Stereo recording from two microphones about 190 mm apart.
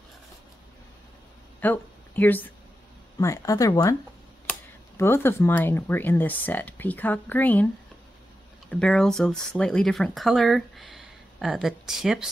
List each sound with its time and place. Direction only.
1.6 s speech: 10° left (ahead or behind)